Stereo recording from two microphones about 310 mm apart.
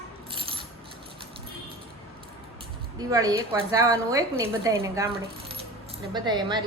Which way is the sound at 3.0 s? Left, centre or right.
Centre.